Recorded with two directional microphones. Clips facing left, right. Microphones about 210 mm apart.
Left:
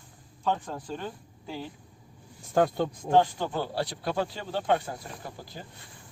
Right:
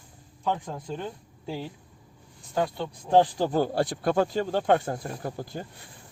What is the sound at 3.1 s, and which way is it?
Speech, 35° right (ahead or behind).